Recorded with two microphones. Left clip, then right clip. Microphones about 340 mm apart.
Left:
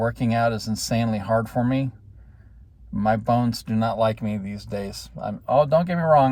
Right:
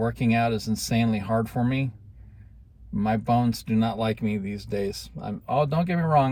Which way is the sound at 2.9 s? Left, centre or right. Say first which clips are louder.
Left 3 dB; centre.